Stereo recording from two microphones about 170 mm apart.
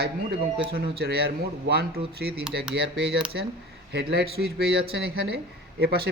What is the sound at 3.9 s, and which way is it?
Speech, 75° right (ahead or behind).